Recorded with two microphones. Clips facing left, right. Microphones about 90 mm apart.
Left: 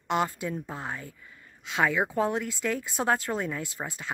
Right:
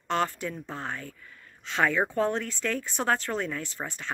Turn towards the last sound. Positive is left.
turn(degrees=10)  # may be behind; listen again after turning